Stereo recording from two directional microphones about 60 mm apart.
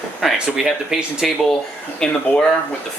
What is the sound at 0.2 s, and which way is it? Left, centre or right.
Speech, centre.